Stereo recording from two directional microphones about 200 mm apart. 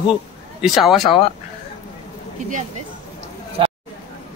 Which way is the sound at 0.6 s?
Centre (ahead or behind).